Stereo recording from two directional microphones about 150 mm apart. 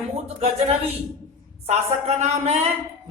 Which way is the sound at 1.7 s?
45° right (ahead or behind).